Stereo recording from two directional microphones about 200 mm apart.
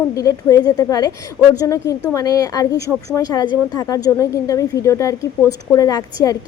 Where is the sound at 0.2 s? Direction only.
15° left (ahead or behind).